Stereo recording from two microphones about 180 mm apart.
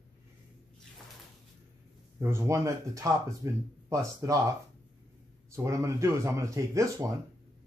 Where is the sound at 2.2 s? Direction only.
15° right (ahead or behind).